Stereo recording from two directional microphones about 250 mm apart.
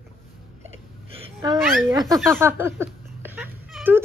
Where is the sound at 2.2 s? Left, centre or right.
Centre.